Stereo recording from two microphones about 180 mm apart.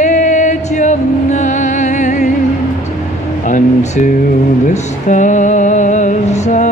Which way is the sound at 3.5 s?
45° left (ahead or behind).